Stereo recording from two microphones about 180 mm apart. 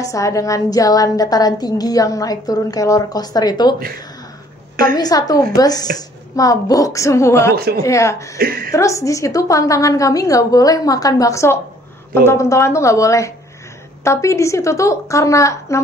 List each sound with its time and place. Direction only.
0.0 s a woman's voice: 20° left (ahead or behind)
4.9 s a woman's voice: 20° left (ahead or behind)
7.5 s a woman's voice: 60° right (ahead or behind)
7.8 s a woman's voice: 15° left (ahead or behind)
8.4 s a woman's voice: 55° right (ahead or behind)
8.7 s a woman's voice: 15° left (ahead or behind)